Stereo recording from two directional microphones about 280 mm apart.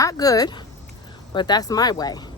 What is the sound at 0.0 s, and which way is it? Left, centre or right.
A woman's voice, centre.